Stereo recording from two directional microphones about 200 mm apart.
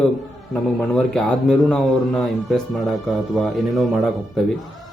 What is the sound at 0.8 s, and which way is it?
Speech, 5° left (ahead or behind).